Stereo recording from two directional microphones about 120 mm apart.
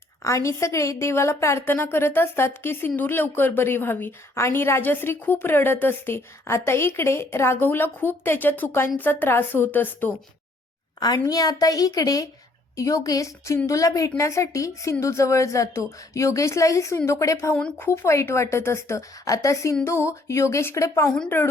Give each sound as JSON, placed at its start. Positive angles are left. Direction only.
{"t": 0.3, "sound": "a woman's voice", "side_deg": 25}
{"t": 11.0, "sound": "a woman's voice", "side_deg": 30}